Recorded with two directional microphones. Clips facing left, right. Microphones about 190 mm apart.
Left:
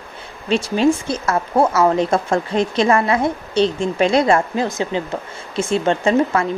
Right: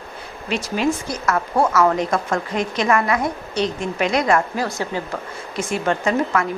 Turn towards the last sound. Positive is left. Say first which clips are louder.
# left 4 dB
turn(degrees=25)  # may be behind; listen again after turning